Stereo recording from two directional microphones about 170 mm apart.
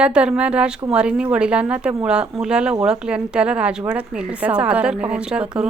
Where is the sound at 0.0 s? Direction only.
5° right (ahead or behind).